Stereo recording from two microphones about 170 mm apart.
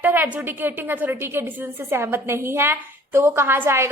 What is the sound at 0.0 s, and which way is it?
A woman's voice, 10° right (ahead or behind).